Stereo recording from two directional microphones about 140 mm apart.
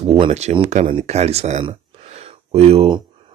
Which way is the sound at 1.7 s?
50° right (ahead or behind).